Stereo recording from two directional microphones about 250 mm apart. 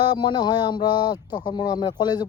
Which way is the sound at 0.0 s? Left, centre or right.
Centre.